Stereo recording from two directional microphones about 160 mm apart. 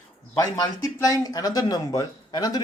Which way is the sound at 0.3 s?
20° left (ahead or behind).